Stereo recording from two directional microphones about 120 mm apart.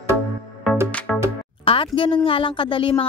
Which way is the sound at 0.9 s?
10° left (ahead or behind).